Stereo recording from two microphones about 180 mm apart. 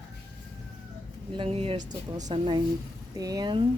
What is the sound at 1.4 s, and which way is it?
Speech, 30° right (ahead or behind).